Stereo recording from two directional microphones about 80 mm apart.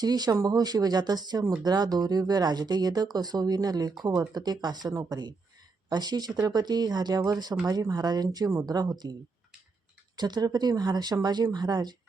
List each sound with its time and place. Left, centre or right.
0.0 s speech: right
10.2 s speech: right